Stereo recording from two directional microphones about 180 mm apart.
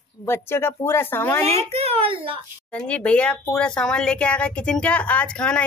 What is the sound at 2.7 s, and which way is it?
Speech, 5° left (ahead or behind).